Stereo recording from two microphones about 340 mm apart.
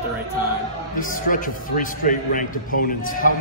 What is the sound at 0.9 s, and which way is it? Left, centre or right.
A man's voice, left.